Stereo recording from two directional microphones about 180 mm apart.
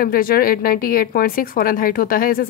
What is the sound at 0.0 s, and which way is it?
A woman's voice, 55° left (ahead or behind).